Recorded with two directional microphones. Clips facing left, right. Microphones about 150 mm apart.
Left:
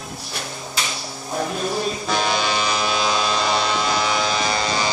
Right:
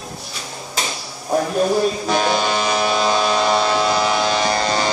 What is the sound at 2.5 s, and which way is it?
Vehicle, 45° right (ahead or behind).